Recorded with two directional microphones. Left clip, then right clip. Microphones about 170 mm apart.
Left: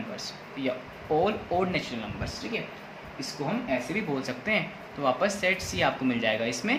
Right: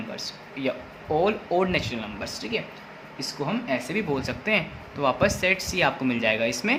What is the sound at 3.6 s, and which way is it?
Speech, 40° right (ahead or behind).